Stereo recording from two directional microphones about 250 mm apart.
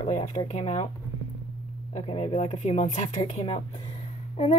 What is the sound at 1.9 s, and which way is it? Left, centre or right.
A woman's voice, left.